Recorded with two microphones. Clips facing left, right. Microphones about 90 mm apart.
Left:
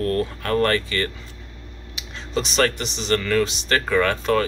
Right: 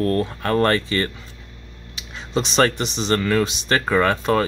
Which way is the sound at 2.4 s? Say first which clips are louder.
Right 3 dB; 25° right (ahead or behind).